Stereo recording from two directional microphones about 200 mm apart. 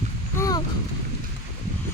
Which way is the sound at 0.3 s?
15° left (ahead or behind).